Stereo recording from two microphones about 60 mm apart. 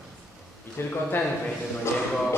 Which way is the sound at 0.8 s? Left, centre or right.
Left.